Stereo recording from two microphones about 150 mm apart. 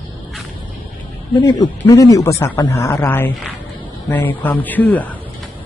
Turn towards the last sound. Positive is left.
turn(degrees=10)  # may be behind; listen again after turning